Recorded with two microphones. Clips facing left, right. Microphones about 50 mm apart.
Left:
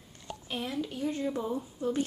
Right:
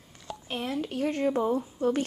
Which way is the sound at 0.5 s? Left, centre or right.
Right.